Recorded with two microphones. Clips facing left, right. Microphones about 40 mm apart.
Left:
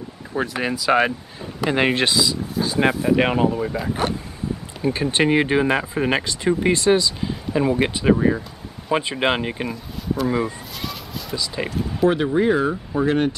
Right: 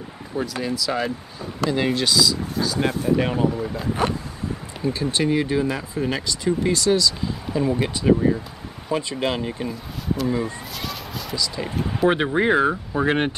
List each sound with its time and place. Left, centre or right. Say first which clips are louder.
0.5 s speech: left 8 dB; left
3.2 s speech: left 4 dB; left
3.5 s speech: left 3 dB; left
4.8 s speech: left 3 dB; left
10.2 s speech: left 3 dB; left
10.8 s vehicle: left 1 dB; centre
11.3 s speech: left 1 dB; left
12.1 s speech: even; right